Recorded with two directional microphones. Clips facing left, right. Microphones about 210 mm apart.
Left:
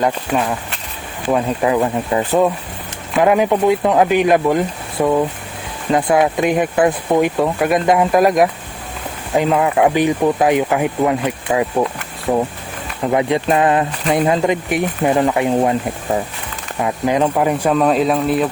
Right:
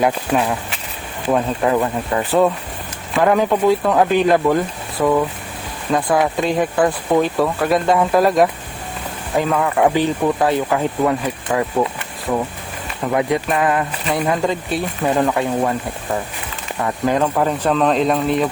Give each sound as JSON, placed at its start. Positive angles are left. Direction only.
{"t": 0.0, "sound": "speech", "side_deg": -5}
{"t": 12.3, "sound": "speech", "side_deg": 35}
{"t": 13.1, "sound": "speech", "side_deg": 20}
{"t": 16.8, "sound": "speech", "side_deg": 20}